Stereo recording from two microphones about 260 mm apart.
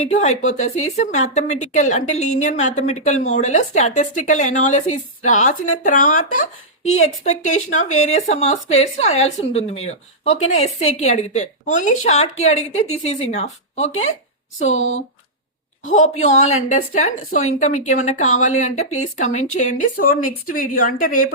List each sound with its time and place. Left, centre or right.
0.0 s a woman's voice: left
14.8 s speech: left
16.0 s a woman's voice: left